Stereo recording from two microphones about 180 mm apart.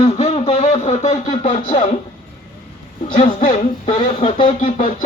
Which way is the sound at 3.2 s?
40° left (ahead or behind).